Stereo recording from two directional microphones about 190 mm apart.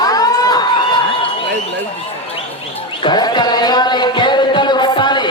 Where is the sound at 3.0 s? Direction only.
20° left (ahead or behind).